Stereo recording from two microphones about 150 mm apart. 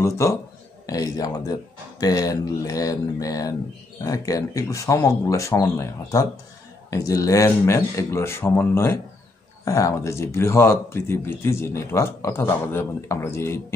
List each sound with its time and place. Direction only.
0.0 s speech: 20° left (ahead or behind)